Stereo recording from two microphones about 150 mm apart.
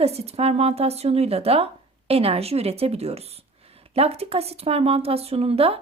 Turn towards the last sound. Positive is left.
turn(degrees=-40)  # may be behind; listen again after turning